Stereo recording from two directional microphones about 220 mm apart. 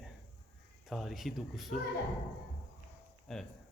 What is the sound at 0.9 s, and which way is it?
Speech, centre (ahead or behind).